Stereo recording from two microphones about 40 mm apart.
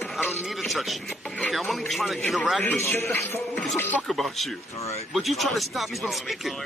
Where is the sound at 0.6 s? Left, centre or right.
Centre.